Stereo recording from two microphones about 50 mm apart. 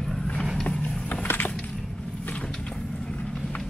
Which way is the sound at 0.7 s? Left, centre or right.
Left.